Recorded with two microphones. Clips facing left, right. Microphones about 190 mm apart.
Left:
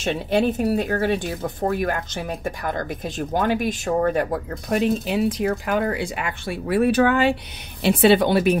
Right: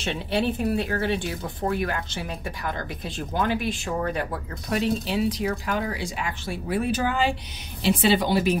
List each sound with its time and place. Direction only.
0.0 s a woman's voice: 45° left (ahead or behind)